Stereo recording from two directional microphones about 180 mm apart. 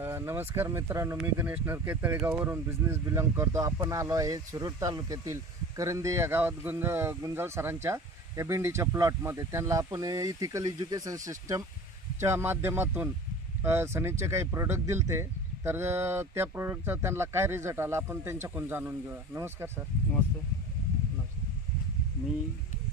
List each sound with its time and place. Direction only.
0.0 s speech: 15° right (ahead or behind)